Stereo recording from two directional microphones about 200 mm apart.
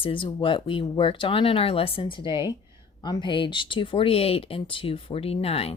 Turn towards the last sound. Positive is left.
turn(degrees=30)  # may be behind; listen again after turning